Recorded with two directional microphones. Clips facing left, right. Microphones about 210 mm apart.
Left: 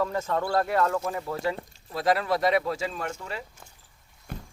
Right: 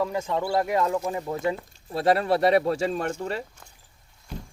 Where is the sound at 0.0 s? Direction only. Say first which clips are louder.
Right 1 dB; 10° right (ahead or behind); by 3.4 s 35° right (ahead or behind).